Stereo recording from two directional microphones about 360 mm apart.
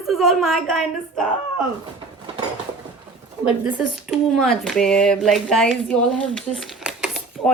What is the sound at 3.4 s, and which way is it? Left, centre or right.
Speech, centre.